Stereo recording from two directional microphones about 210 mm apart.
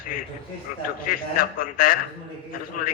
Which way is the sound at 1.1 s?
40° left (ahead or behind).